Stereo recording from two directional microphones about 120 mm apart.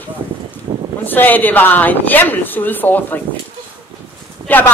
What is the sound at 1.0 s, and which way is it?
A woman's voice, 15° left (ahead or behind).